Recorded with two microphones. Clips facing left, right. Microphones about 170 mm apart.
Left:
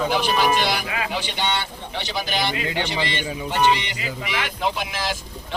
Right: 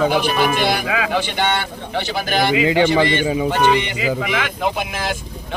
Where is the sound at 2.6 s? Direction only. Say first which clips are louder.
Right 10 dB; 90° right.